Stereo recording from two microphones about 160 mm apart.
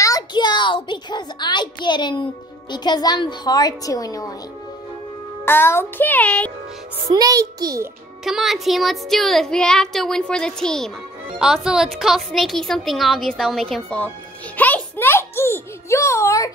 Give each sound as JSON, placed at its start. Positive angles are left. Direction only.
{"t": 0.0, "sound": "a sound", "side_deg": 25}
{"t": 2.7, "sound": "a woman's voice", "side_deg": 25}
{"t": 5.4, "sound": "a child's voice", "side_deg": 15}
{"t": 7.1, "sound": "a child's voice", "side_deg": -20}
{"t": 8.2, "sound": "a woman's voice", "side_deg": 0}